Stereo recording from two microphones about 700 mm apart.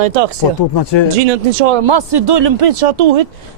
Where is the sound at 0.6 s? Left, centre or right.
Left.